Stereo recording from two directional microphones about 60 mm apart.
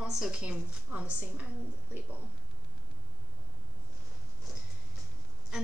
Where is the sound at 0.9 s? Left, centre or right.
Right.